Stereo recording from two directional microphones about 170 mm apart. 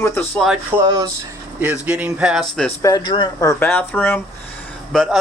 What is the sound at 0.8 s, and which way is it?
Speech, 20° right (ahead or behind).